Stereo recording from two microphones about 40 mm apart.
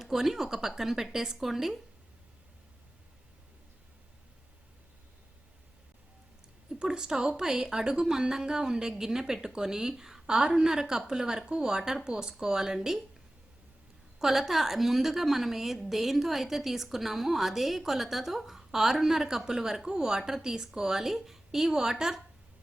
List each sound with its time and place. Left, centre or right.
0.0 s speech: centre
6.7 s speech: centre
14.2 s a woman's voice: centre